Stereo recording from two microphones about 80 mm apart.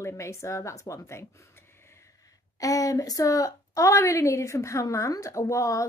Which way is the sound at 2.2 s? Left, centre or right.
Left.